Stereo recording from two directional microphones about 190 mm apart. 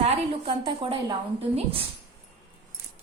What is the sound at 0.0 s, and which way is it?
A woman's voice, 30° right (ahead or behind).